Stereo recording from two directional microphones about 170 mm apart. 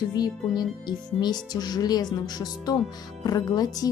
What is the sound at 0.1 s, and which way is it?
Music, 25° left (ahead or behind).